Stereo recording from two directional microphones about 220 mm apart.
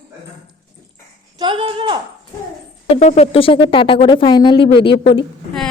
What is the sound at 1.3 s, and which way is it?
Speech, 20° right (ahead or behind).